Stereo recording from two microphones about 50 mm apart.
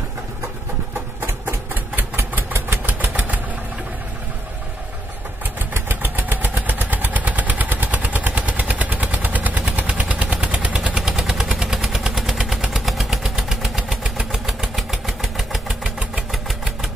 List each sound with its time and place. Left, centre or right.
2.3 s vehicle: right
5.7 s vehicle: right
9.8 s machine gun: right
10.3 s gunshot: right
11.0 s vehicle: centre